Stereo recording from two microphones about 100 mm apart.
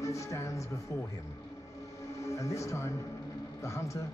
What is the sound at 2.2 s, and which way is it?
A man's voice, 30° left (ahead or behind).